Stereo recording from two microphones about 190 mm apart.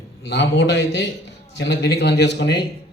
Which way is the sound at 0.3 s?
65° left (ahead or behind).